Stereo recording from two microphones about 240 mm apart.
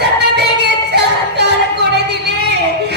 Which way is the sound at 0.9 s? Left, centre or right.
Right.